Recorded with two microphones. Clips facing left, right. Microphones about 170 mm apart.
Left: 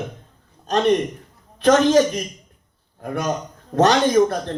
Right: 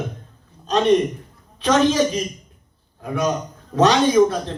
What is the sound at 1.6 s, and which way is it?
Speech, 50° left (ahead or behind).